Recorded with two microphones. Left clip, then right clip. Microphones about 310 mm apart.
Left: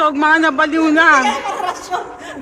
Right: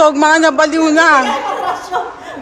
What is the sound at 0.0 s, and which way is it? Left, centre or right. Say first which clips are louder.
A man's voice: right 4 dB; centre.